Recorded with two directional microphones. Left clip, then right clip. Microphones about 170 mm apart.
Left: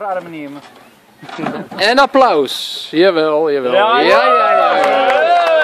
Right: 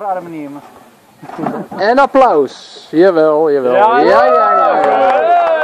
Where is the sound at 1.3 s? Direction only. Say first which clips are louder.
Right 2 dB; 30° left (ahead or behind).